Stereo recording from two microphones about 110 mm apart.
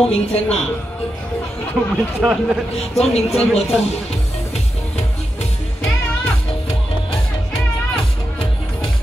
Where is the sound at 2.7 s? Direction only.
70° left (ahead or behind).